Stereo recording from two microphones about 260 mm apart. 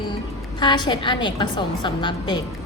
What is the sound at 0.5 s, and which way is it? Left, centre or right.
A woman's voice, centre.